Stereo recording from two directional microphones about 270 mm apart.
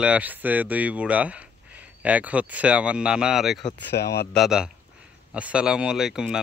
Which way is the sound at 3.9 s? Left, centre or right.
Left.